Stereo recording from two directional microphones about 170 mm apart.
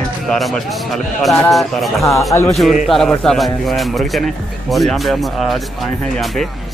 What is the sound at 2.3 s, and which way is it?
Speech, 20° left (ahead or behind).